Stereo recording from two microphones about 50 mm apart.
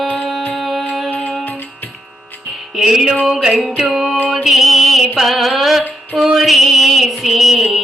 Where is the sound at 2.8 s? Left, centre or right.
Centre.